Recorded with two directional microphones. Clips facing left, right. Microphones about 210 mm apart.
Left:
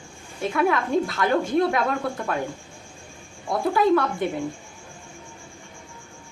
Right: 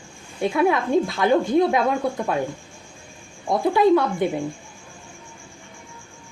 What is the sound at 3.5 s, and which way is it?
Speech, 25° right (ahead or behind).